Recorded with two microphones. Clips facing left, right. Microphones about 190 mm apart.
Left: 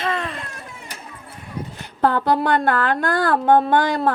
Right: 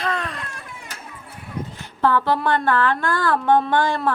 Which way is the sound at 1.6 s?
10° left (ahead or behind).